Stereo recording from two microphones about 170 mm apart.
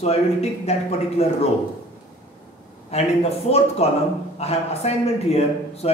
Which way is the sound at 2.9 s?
40° left (ahead or behind).